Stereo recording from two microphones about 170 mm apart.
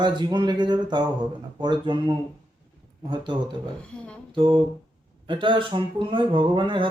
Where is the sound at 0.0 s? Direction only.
25° right (ahead or behind).